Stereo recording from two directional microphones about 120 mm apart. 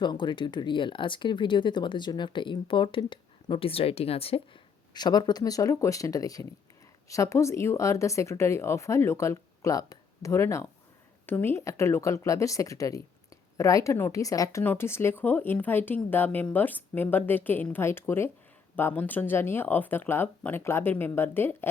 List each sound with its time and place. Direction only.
0.0 s speech: 40° left (ahead or behind)
4.9 s speech: 35° left (ahead or behind)
14.6 s a woman's voice: 15° left (ahead or behind)